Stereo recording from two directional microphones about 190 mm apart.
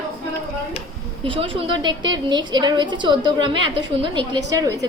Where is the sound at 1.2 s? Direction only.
30° right (ahead or behind).